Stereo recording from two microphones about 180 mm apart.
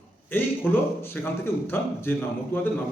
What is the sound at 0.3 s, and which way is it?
A man's voice, 10° left (ahead or behind).